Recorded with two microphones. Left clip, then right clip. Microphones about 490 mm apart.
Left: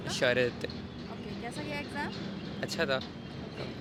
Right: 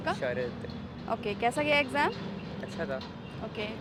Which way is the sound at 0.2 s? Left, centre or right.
Left.